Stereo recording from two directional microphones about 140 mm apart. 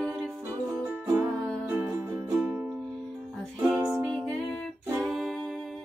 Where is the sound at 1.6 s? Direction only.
15° right (ahead or behind).